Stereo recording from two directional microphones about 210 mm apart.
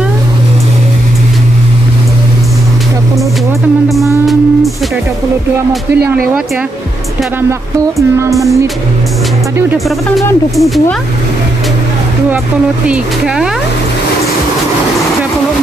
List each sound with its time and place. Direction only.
8.2 s music: 15° right (ahead or behind)
10.5 s speech: centre (ahead or behind)
12.8 s speech: 5° right (ahead or behind)